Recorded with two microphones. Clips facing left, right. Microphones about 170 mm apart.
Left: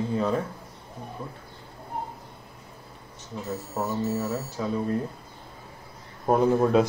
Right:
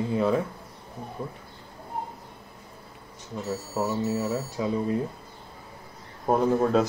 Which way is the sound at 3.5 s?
5° right (ahead or behind).